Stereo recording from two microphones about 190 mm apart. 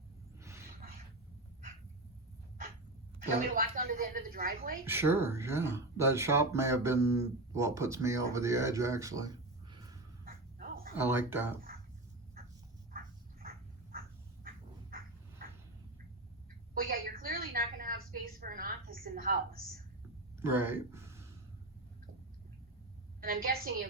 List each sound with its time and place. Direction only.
0.4 s a sound: 15° right (ahead or behind)
3.2 s a woman's voice: 45° right (ahead or behind)
4.9 s speech: 10° right (ahead or behind)
10.2 s dog: 50° right (ahead or behind)
10.9 s speech: 10° right (ahead or behind)
14.4 s bird: 50° right (ahead or behind)
16.7 s a sound: 50° right (ahead or behind)
20.4 s speech: 10° right (ahead or behind)
23.2 s a woman's voice: 50° right (ahead or behind)